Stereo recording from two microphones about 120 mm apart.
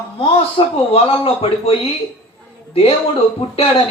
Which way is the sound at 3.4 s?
60° left (ahead or behind).